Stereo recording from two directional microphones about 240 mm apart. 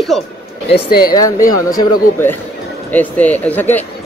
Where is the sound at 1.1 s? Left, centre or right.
Centre.